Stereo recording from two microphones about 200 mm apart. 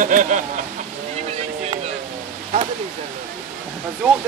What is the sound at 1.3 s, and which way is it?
Vehicle, 30° right (ahead or behind).